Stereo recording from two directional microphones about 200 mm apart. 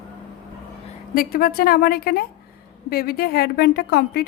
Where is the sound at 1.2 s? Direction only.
50° left (ahead or behind).